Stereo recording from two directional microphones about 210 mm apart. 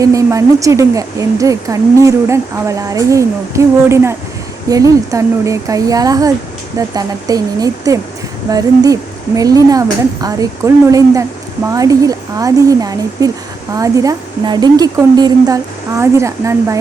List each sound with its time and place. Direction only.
0.0 s speech: 15° right (ahead or behind)